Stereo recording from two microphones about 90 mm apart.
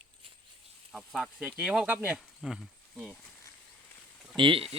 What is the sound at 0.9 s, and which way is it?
Speech, centre (ahead or behind).